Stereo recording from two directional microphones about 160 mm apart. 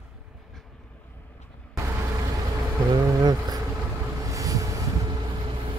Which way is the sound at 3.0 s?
25° right (ahead or behind).